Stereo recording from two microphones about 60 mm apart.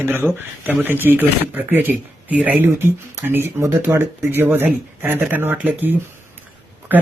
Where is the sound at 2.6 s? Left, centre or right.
Right.